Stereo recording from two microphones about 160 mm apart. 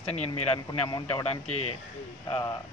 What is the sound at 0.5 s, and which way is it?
Speech, 25° left (ahead or behind).